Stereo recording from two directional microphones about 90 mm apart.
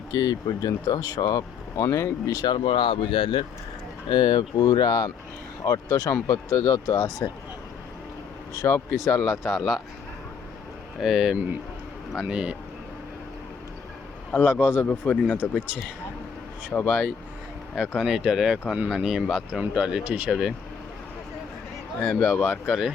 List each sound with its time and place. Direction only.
0.1 s speech: 45° left (ahead or behind)
2.4 s speech: 60° left (ahead or behind)
4.1 s speech: 50° left (ahead or behind)
8.6 s speech: 25° left (ahead or behind)
9.6 s speech: centre (ahead or behind)
11.0 s speech: 5° right (ahead or behind)
14.4 s speech: 10° right (ahead or behind)
14.8 s speech: 15° left (ahead or behind)
16.7 s speech: 15° left (ahead or behind)
17.7 s speech: 5° right (ahead or behind)
22.0 s speech: 5° left (ahead or behind)
22.4 s speech: 5° right (ahead or behind)